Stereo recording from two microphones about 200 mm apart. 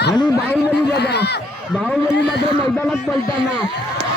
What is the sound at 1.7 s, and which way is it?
A man's voice, centre (ahead or behind).